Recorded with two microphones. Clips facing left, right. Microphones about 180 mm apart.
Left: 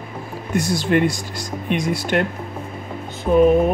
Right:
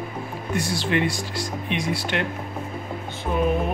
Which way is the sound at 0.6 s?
45° left (ahead or behind).